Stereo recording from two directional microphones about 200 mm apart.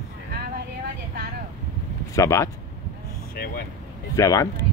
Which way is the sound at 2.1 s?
15° left (ahead or behind).